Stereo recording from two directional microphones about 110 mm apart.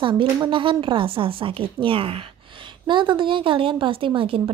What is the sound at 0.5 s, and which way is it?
A woman's voice, 50° right (ahead or behind).